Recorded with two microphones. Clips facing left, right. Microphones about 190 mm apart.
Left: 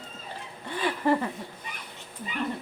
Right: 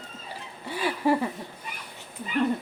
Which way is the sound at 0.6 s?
10° right (ahead or behind).